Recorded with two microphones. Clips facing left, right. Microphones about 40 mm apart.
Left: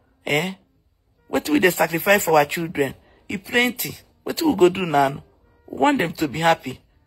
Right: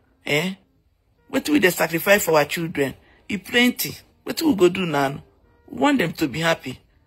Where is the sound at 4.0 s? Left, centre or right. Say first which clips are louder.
Left 1 dB; right.